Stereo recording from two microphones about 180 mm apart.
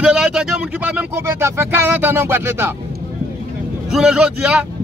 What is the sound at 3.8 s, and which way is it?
Speech, 5° right (ahead or behind).